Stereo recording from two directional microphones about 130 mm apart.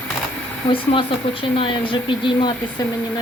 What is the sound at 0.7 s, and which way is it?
Speech, 45° left (ahead or behind).